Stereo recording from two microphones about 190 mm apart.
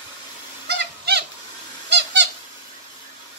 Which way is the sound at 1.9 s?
65° right (ahead or behind).